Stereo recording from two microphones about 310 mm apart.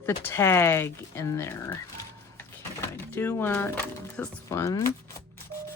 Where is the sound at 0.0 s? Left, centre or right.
Centre.